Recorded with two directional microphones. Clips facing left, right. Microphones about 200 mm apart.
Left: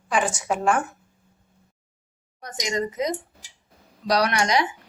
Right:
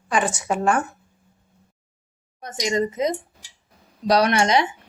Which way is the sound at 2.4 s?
25° right (ahead or behind).